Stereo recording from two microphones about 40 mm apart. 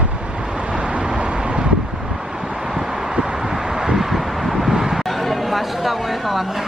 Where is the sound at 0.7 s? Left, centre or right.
Right.